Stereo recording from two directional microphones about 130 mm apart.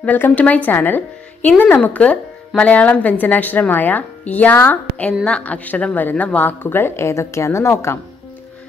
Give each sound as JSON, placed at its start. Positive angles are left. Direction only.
{"t": 0.0, "sound": "a woman's voice", "side_deg": 10}